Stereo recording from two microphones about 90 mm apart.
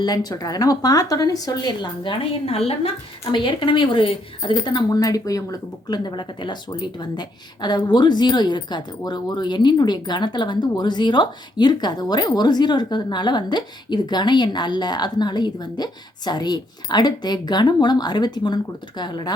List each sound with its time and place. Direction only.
0.0 s speech: 50° left (ahead or behind)
2.5 s a woman's voice: 90° left
3.3 s a woman's voice: 65° left (ahead or behind)
4.9 s speech: 45° left (ahead or behind)